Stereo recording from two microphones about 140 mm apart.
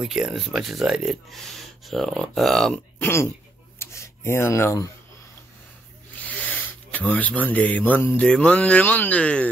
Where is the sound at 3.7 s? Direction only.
20° left (ahead or behind).